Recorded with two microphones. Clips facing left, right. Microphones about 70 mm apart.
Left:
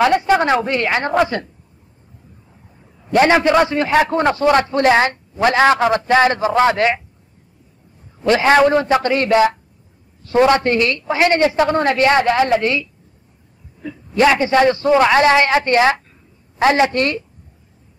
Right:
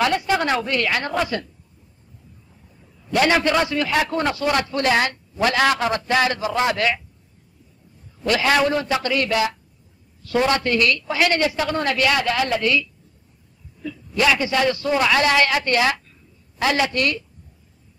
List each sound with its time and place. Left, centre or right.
0.0 s a woman's voice: left
2.8 s a man's voice: left
8.2 s a man's voice: left